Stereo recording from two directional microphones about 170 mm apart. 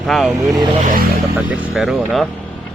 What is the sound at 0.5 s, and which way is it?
Speech, 25° right (ahead or behind).